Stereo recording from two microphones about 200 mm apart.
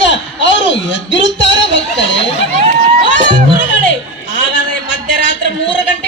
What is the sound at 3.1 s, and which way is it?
Music, 65° left (ahead or behind).